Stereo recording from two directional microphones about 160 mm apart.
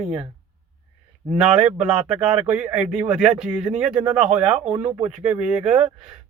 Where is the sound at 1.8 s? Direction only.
5° right (ahead or behind).